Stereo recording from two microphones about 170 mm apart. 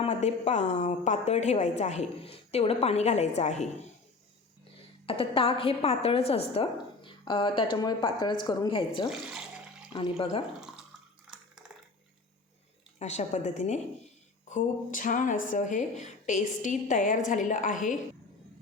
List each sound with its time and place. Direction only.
0.0 s a woman's voice: 40° left (ahead or behind)
5.0 s a woman's voice: 30° left (ahead or behind)
10.6 s drip: 5° right (ahead or behind)
13.0 s speech: 40° left (ahead or behind)